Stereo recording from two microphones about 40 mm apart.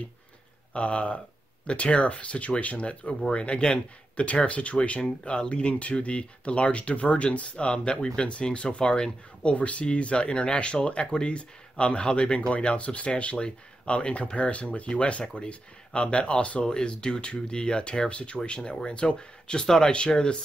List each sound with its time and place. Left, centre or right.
0.7 s speech: left